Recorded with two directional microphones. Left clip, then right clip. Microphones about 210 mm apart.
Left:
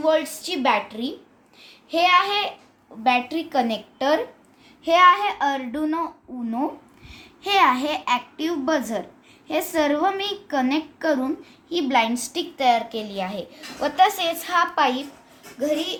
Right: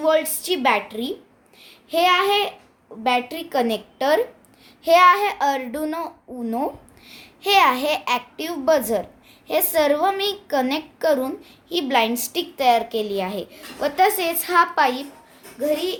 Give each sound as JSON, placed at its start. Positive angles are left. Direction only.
{"t": 0.0, "sound": "a woman's voice", "side_deg": -40}
{"t": 1.6, "sound": "child singing", "side_deg": -35}
{"t": 3.0, "sound": "a woman's voice", "side_deg": -40}
{"t": 7.1, "sound": "a woman's voice", "side_deg": -45}